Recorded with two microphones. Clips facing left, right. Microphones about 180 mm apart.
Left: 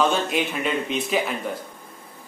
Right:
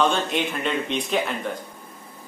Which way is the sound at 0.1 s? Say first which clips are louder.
Left 1 dB; 5° left (ahead or behind).